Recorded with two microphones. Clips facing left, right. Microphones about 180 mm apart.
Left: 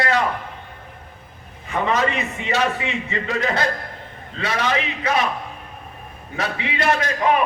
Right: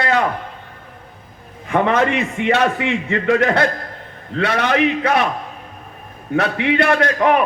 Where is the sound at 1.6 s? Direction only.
60° right (ahead or behind).